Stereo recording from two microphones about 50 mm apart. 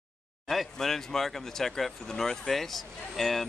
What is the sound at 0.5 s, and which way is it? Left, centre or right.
Speech, centre.